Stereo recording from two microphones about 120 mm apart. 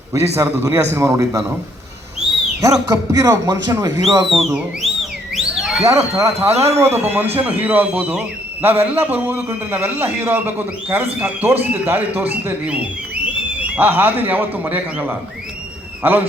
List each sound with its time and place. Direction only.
0.1 s speech: 25° right (ahead or behind)
2.2 s a sound: centre (ahead or behind)
2.6 s speech: 30° right (ahead or behind)
4.4 s speech: centre (ahead or behind)
5.3 s a sound: centre (ahead or behind)
5.8 s a man's voice: 25° right (ahead or behind)